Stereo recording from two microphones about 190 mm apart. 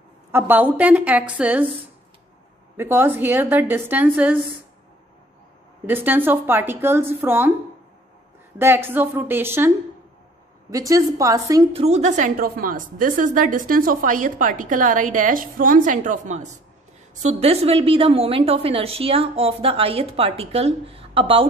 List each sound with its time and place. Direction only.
0.3 s a woman's voice: 10° right (ahead or behind)
2.8 s a woman's voice: 10° right (ahead or behind)
5.9 s a woman's voice: 10° right (ahead or behind)
8.5 s a woman's voice: 10° right (ahead or behind)
10.7 s a woman's voice: 15° right (ahead or behind)
11.7 s a woman's voice: 35° right (ahead or behind)